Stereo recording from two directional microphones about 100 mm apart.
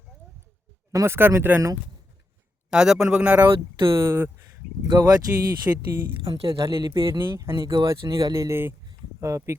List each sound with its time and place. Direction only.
0.9 s speech: 25° right (ahead or behind)
2.6 s speech: 5° right (ahead or behind)
3.8 s speech: 30° right (ahead or behind)
4.9 s speech: 40° right (ahead or behind)
5.7 s speech: 20° right (ahead or behind)
6.2 s speech: 65° right (ahead or behind); by 7.0 s 45° right (ahead or behind)
7.1 s speech: 25° right (ahead or behind)